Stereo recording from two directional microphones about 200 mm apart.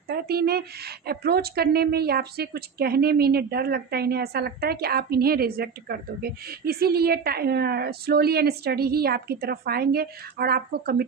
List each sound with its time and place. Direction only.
0.1 s speech: 50° right (ahead or behind)